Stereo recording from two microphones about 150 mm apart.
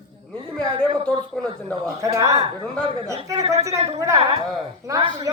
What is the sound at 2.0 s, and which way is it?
Speech, 20° right (ahead or behind).